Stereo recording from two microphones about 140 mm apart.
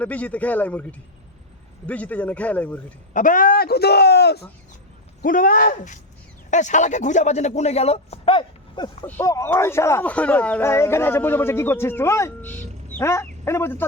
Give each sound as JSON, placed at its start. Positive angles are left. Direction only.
{"t": 0.0, "sound": "speech", "side_deg": 10}
{"t": 3.1, "sound": "speech", "side_deg": 70}
{"t": 5.2, "sound": "a man's voice", "side_deg": 75}
{"t": 9.2, "sound": "speech", "side_deg": 20}